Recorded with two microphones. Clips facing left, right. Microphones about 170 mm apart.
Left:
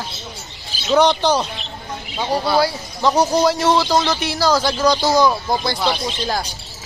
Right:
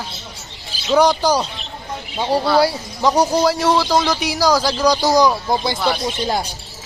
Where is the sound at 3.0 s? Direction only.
10° right (ahead or behind).